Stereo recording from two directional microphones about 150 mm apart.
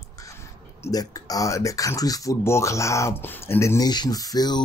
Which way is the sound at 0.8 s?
25° left (ahead or behind).